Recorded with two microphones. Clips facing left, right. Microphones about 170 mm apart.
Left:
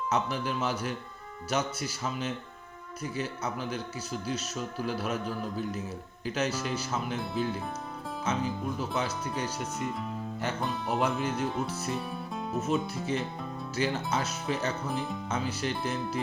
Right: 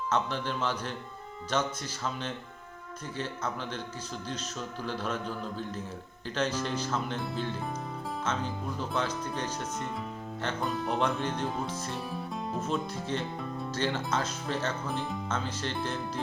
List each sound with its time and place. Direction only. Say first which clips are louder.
0.1 s speech: even; 10° left (ahead or behind)